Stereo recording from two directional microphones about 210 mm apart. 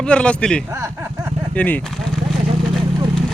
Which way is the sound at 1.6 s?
5° left (ahead or behind).